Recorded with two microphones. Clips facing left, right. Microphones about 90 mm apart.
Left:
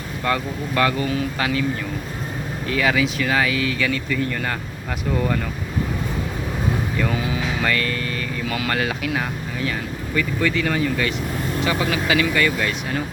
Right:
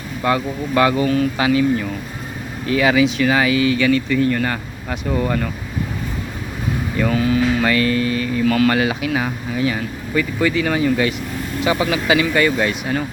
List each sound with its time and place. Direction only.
0.3 s speech: 10° right (ahead or behind)
2.6 s speech: 5° right (ahead or behind)
7.1 s speech: 10° left (ahead or behind)
7.6 s speech: 5° right (ahead or behind)
8.4 s speech: 5° left (ahead or behind)
8.7 s speech: 5° right (ahead or behind); by 12.7 s 25° right (ahead or behind)